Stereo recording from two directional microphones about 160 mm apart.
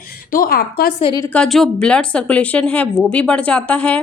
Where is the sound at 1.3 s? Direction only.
Centre (ahead or behind).